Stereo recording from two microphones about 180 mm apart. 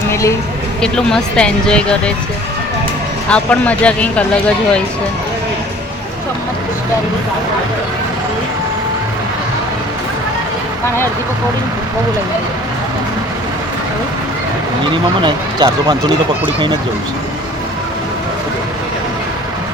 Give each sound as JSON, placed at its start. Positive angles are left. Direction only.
{"t": 0.1, "sound": "a sound", "side_deg": 15}
{"t": 0.8, "sound": "speech", "side_deg": 5}
{"t": 3.2, "sound": "speech", "side_deg": 5}
{"t": 15.2, "sound": "speech", "side_deg": -25}